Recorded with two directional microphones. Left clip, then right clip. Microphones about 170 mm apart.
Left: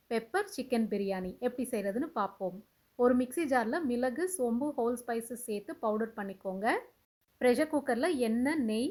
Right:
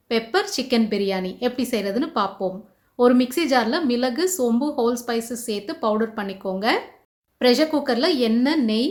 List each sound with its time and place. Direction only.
0.1 s a woman's voice: 50° left (ahead or behind)